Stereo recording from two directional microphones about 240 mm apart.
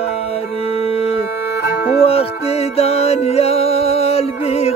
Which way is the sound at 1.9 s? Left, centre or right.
Left.